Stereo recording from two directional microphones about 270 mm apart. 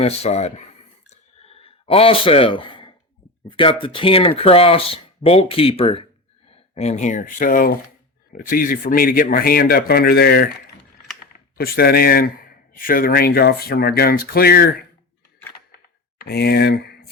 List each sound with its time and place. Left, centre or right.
0.0 s speech: left
1.1 s a sound: left
3.5 s speech: centre; by 10.5 s left
11.5 s speech: left
16.2 s speech: left